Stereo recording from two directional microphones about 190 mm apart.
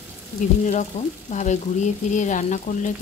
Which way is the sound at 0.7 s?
40° left (ahead or behind).